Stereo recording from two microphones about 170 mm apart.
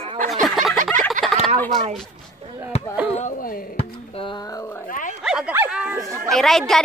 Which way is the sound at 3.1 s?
50° left (ahead or behind).